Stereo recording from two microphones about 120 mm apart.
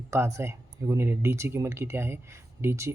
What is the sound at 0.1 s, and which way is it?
Speech, 25° right (ahead or behind).